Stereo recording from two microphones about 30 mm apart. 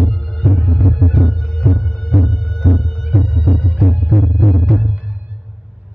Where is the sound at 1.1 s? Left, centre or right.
Left.